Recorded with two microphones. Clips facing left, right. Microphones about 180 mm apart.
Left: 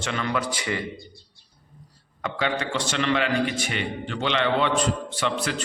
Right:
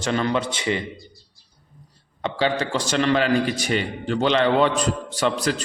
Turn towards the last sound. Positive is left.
turn(degrees=-40)  # may be behind; listen again after turning